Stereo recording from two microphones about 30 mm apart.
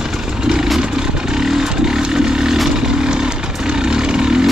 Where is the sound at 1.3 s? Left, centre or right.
Centre.